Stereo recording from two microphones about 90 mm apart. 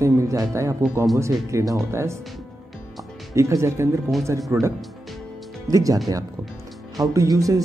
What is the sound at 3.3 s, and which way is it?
Speech, 30° right (ahead or behind).